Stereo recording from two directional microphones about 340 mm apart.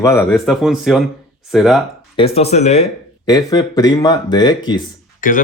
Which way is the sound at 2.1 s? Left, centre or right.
Centre.